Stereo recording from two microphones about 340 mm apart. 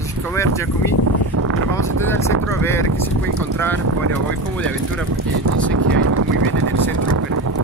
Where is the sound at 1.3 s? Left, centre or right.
Right.